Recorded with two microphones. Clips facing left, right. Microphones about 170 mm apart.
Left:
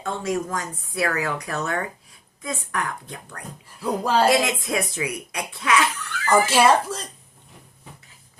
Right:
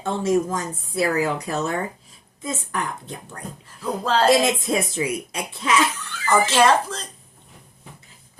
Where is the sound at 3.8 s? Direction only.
10° left (ahead or behind).